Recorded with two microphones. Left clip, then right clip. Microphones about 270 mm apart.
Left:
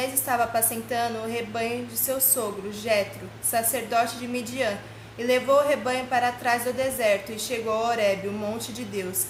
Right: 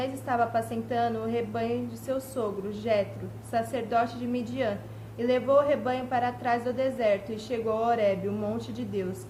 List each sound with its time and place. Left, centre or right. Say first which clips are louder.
0.0 s a woman's voice: left 3 dB; centre